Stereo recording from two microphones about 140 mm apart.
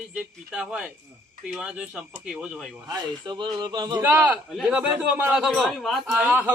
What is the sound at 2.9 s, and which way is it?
A man's voice, 30° right (ahead or behind).